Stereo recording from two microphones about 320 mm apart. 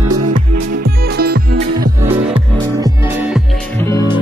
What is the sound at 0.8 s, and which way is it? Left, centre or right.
Music, right.